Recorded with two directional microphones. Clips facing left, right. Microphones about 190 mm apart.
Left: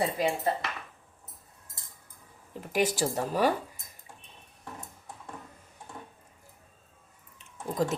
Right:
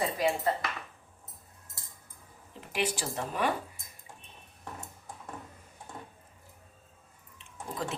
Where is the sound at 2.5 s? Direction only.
45° left (ahead or behind).